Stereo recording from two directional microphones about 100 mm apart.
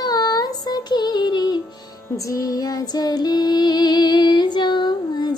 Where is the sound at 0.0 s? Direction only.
40° left (ahead or behind).